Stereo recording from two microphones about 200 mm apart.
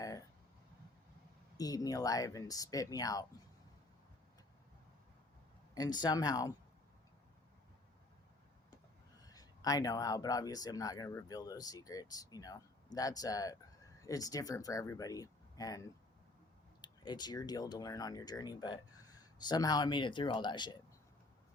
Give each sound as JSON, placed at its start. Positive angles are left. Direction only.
{"t": 1.5, "sound": "speech", "side_deg": 20}
{"t": 5.7, "sound": "speech", "side_deg": 20}
{"t": 9.2, "sound": "speech", "side_deg": 20}